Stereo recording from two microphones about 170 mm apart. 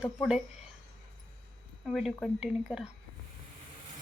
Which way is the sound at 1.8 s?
Centre (ahead or behind).